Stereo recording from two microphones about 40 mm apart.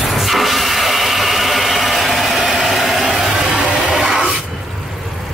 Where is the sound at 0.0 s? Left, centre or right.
Centre.